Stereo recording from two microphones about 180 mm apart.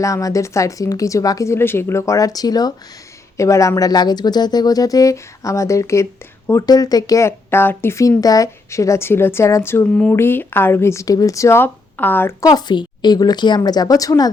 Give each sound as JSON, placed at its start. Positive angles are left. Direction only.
{"t": 0.0, "sound": "speech", "side_deg": 20}